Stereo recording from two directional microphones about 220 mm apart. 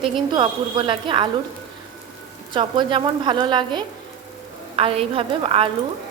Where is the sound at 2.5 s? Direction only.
20° right (ahead or behind).